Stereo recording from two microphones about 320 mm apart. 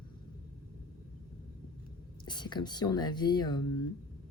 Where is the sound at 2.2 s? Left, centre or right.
Centre.